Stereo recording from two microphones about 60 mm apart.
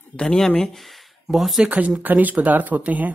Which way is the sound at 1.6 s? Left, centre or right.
Right.